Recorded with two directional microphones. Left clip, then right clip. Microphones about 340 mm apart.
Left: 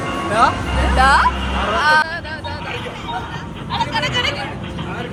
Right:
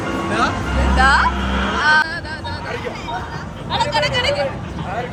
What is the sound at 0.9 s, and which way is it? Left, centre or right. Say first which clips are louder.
Speech: left 1 dB; centre.